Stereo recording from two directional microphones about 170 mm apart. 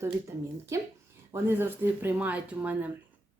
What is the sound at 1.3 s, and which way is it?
Speech, 10° right (ahead or behind).